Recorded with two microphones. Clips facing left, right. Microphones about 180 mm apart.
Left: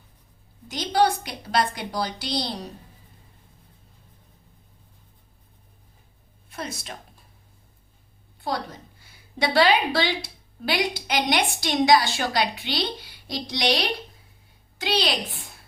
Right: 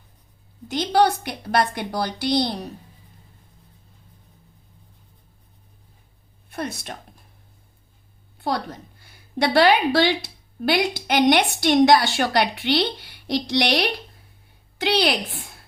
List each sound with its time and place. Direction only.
0.7 s a woman's voice: 55° right (ahead or behind)
9.4 s a woman's voice: 60° right (ahead or behind)